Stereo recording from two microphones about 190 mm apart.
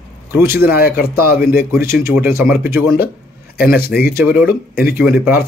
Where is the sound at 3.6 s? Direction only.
55° left (ahead or behind).